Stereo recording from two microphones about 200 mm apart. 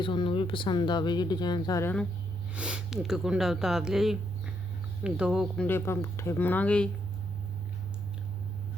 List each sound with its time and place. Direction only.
0.0 s speech: 25° left (ahead or behind)
2.6 s speech: 5° right (ahead or behind)
5.6 s speech: 10° left (ahead or behind)